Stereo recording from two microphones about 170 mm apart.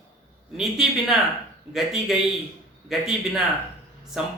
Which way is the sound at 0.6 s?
Centre (ahead or behind).